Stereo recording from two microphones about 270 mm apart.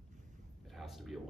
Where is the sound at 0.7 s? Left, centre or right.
Centre.